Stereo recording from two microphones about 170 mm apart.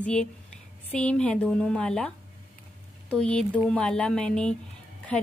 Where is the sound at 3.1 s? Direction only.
5° left (ahead or behind).